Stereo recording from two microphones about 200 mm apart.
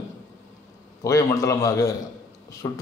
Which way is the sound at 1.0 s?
15° left (ahead or behind).